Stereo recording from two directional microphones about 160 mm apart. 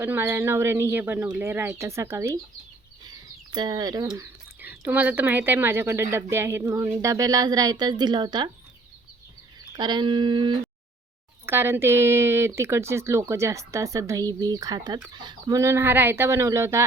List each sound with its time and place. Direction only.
0.0 s speech: 15° right (ahead or behind)
4.6 s speech: 10° right (ahead or behind); by 8.4 s 30° right (ahead or behind)
9.7 s speech: 25° right (ahead or behind)
11.4 s speech: 15° right (ahead or behind)